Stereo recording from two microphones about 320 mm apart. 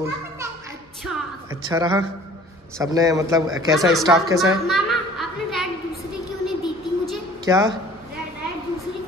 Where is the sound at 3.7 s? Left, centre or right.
Centre.